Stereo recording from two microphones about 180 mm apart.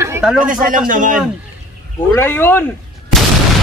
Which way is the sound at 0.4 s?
50° right (ahead or behind).